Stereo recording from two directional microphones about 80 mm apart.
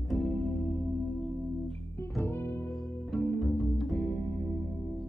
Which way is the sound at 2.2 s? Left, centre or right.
Left.